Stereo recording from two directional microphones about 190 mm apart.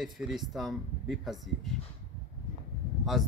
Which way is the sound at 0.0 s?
Centre (ahead or behind).